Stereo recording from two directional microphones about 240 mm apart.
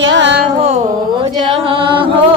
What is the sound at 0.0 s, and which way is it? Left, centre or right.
Carnatic music, right.